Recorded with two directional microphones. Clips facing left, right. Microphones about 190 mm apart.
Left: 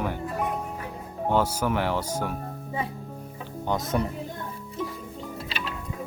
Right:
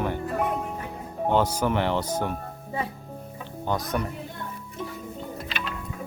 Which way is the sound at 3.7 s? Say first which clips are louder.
Left 1 dB; 25° left (ahead or behind).